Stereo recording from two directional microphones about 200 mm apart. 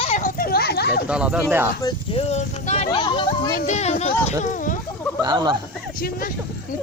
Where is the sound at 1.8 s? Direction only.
30° left (ahead or behind).